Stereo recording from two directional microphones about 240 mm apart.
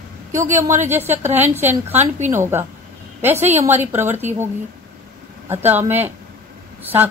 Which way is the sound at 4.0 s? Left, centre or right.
Centre.